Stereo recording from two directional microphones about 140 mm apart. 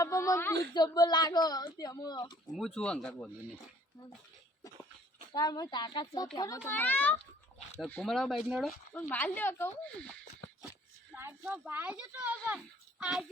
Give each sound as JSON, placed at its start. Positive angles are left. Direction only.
{"t": 0.0, "sound": "a sound", "side_deg": 20}
{"t": 0.7, "sound": "speech", "side_deg": 30}
{"t": 2.6, "sound": "speech", "side_deg": 5}
{"t": 5.3, "sound": "speech", "side_deg": 30}
{"t": 6.7, "sound": "speech", "side_deg": 15}
{"t": 8.1, "sound": "speech", "side_deg": 0}
{"t": 8.9, "sound": "speech", "side_deg": 15}
{"t": 11.1, "sound": "speech", "side_deg": -15}